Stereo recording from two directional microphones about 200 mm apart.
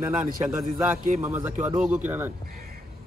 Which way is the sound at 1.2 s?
10° right (ahead or behind).